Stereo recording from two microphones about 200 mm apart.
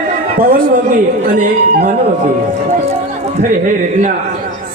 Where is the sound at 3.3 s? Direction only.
40° right (ahead or behind).